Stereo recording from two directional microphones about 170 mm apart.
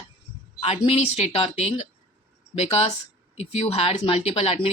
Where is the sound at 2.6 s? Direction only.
35° left (ahead or behind).